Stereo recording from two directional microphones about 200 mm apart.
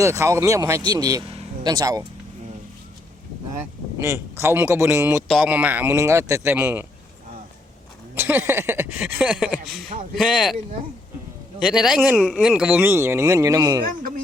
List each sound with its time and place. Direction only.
0.0 s speech: 15° right (ahead or behind)
4.0 s speech: 15° right (ahead or behind)
8.1 s speech: 10° right (ahead or behind)
11.6 s speech: 5° right (ahead or behind)